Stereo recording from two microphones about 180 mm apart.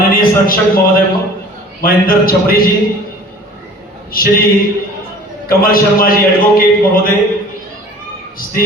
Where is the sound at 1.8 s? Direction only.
55° left (ahead or behind).